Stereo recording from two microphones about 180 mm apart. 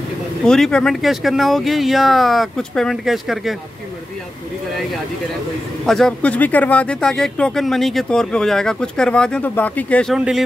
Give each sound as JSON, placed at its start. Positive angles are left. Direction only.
{"t": 0.4, "sound": "speech", "side_deg": 0}
{"t": 5.9, "sound": "speech", "side_deg": 5}
{"t": 10.1, "sound": "speech", "side_deg": -5}